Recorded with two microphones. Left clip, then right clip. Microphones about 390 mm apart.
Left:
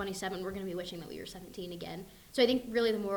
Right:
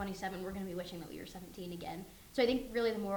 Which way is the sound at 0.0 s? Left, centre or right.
Left.